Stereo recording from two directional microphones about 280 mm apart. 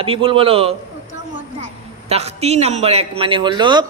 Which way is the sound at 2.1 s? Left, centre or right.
Right.